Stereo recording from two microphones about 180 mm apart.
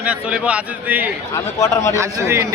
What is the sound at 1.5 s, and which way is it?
Speech, 15° left (ahead or behind).